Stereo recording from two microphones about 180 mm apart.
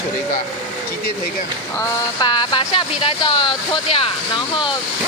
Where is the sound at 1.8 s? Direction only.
20° left (ahead or behind).